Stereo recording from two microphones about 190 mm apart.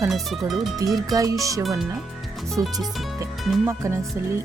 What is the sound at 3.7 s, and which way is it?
Speech, 15° right (ahead or behind).